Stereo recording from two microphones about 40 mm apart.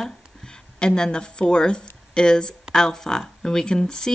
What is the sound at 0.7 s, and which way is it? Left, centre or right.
Speech, centre.